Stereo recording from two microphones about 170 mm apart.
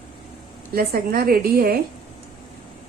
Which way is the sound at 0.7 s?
60° right (ahead or behind).